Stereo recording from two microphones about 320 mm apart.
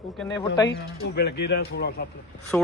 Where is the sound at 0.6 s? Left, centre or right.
Left.